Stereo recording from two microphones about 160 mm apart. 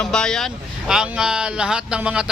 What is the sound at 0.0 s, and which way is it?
A man's voice, 5° left (ahead or behind).